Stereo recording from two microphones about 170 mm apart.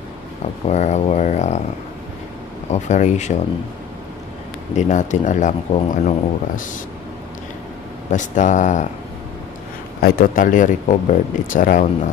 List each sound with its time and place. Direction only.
0.7 s speech: 40° left (ahead or behind)
2.7 s speech: 45° left (ahead or behind)
4.7 s speech: 45° left (ahead or behind)
8.1 s speech: 45° left (ahead or behind)
10.0 s speech: 55° left (ahead or behind)